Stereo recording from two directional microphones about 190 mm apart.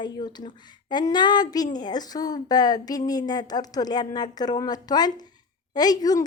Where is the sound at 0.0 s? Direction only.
20° left (ahead or behind).